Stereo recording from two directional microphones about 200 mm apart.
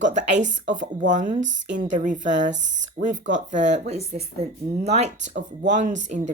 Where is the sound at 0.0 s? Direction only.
35° right (ahead or behind).